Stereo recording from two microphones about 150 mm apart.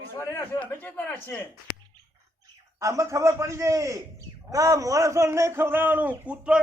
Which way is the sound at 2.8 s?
20° right (ahead or behind).